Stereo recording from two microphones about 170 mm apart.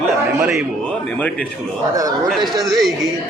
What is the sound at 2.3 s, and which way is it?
Speech, centre (ahead or behind).